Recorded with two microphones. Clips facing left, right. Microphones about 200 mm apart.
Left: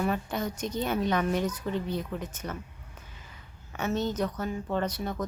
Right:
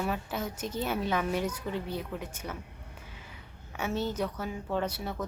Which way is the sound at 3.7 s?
10° right (ahead or behind).